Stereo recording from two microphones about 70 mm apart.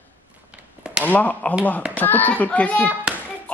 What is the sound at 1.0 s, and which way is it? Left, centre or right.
Speech, left.